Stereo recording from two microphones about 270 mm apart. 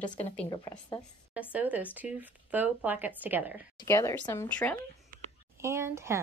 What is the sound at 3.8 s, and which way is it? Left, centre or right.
Speech, centre.